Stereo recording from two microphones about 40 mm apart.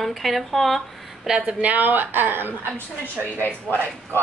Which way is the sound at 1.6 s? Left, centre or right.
Right.